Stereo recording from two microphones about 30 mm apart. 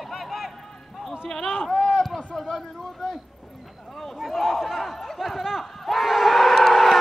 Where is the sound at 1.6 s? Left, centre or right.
Centre.